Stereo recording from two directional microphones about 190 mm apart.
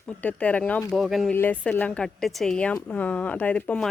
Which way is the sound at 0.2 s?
10° left (ahead or behind).